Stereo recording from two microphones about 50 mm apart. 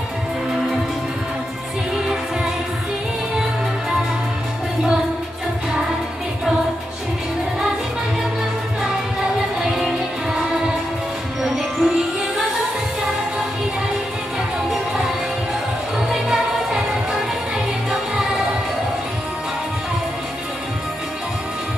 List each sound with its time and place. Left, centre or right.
9.6 s music: centre
11.8 s music: centre
16.1 s music: centre